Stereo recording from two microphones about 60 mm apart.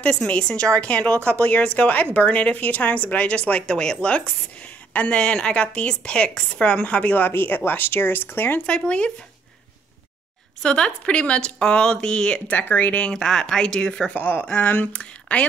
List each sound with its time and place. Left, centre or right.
0.0 s a woman's voice: centre
7.2 s speech: left
8.6 s a woman's voice: centre
10.6 s a woman's voice: centre
13.1 s a woman's voice: centre
14.1 s a woman's voice: left